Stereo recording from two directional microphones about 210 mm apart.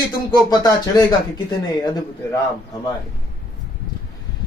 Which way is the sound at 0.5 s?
20° left (ahead or behind).